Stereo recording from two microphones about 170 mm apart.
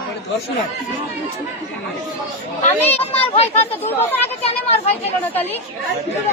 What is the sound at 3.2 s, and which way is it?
Speech, 35° left (ahead or behind).